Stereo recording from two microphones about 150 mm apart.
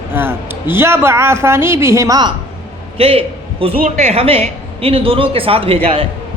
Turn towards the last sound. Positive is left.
turn(degrees=-40)  # may be behind; listen again after turning